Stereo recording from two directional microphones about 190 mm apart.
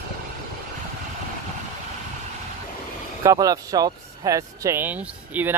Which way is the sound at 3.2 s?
20° right (ahead or behind).